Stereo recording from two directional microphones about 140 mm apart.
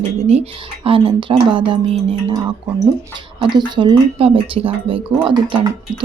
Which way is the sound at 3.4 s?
35° right (ahead or behind).